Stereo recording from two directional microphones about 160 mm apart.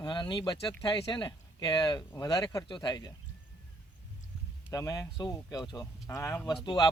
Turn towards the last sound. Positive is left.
turn(degrees=25)  # may be behind; listen again after turning